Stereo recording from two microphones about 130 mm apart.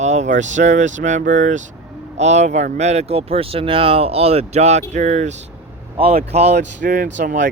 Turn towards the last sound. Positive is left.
turn(degrees=-75)  # may be behind; listen again after turning